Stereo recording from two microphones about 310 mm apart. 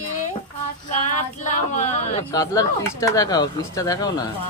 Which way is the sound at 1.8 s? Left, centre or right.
Left.